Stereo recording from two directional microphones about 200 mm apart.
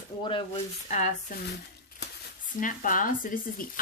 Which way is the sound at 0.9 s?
40° left (ahead or behind).